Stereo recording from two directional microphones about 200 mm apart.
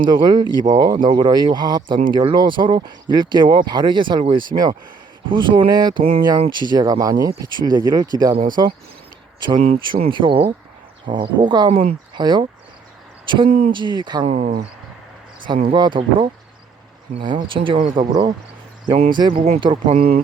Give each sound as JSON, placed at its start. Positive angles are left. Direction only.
{"t": 0.0, "sound": "speech", "side_deg": -20}
{"t": 9.6, "sound": "speech", "side_deg": -30}
{"t": 13.7, "sound": "speech", "side_deg": -25}
{"t": 14.3, "sound": "speech", "side_deg": -40}
{"t": 15.7, "sound": "speech", "side_deg": -25}
{"t": 17.2, "sound": "speech", "side_deg": -25}
{"t": 18.1, "sound": "speech", "side_deg": -20}
{"t": 19.9, "sound": "speech", "side_deg": -45}